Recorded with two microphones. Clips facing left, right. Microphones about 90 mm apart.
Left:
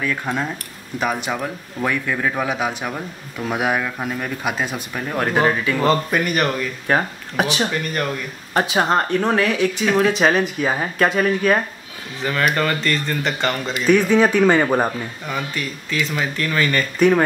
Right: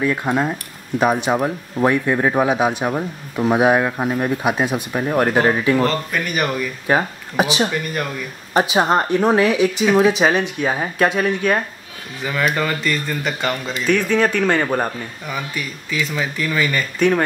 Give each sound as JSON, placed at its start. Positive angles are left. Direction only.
{"t": 0.2, "sound": "speech", "side_deg": -15}
{"t": 1.3, "sound": "speech", "side_deg": -30}
{"t": 6.2, "sound": "speech", "side_deg": -5}
{"t": 13.8, "sound": "speech", "side_deg": 10}
{"t": 15.3, "sound": "speech", "side_deg": -10}